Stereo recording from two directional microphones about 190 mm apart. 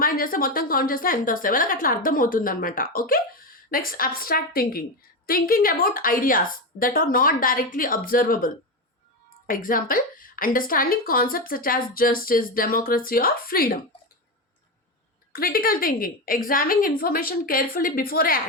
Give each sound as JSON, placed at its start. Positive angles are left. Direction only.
{"t": 0.0, "sound": "a woman's voice", "side_deg": 50}
{"t": 9.5, "sound": "a woman's voice", "side_deg": 45}
{"t": 15.3, "sound": "a woman's voice", "side_deg": 50}